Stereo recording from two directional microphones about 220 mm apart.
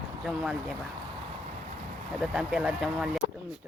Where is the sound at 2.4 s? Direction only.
5° right (ahead or behind).